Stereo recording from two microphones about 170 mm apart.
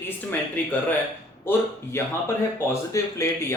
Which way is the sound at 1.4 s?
15° left (ahead or behind).